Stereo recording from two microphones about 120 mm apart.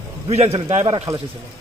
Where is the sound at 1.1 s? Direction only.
25° right (ahead or behind).